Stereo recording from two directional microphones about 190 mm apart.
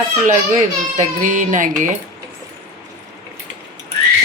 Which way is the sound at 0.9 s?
40° right (ahead or behind).